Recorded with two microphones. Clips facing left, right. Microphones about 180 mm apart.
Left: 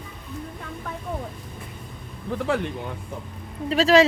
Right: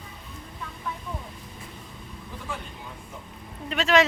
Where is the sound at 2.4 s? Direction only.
80° left.